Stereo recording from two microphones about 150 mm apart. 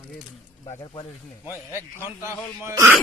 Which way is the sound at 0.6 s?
25° left (ahead or behind).